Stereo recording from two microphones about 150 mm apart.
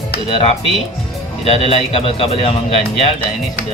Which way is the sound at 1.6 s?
40° left (ahead or behind).